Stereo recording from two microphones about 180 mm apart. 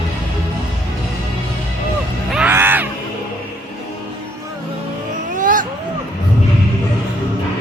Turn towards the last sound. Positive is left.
turn(degrees=-45)  # may be behind; listen again after turning